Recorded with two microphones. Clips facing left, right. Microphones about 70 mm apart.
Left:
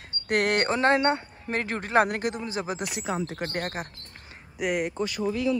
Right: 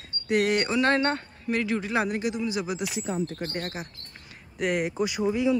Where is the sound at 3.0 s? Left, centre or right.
Left.